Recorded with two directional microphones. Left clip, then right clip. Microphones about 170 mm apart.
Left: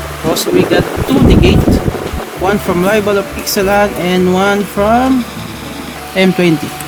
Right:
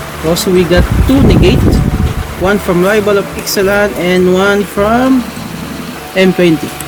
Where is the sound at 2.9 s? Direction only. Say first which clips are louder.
Even; 30° left (ahead or behind).